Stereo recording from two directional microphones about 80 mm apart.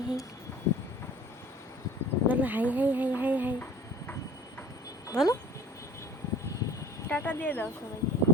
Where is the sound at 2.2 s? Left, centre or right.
Right.